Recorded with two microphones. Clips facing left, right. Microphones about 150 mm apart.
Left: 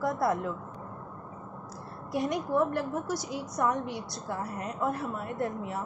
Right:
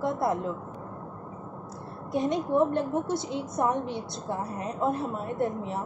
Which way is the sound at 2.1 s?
25° right (ahead or behind).